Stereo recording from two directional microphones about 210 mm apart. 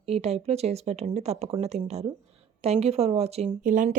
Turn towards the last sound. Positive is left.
turn(degrees=-35)  # may be behind; listen again after turning